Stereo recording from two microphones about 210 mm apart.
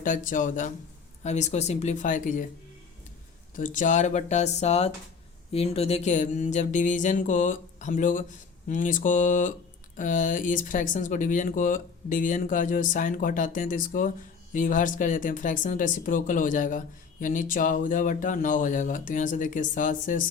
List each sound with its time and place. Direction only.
0.0 s speech: 40° left (ahead or behind)
3.5 s speech: 40° left (ahead or behind)